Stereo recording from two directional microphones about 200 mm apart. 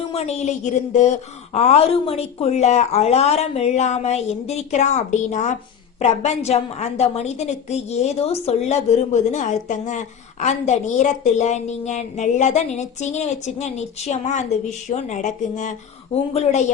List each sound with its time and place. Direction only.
0.1 s a woman's voice: 30° left (ahead or behind)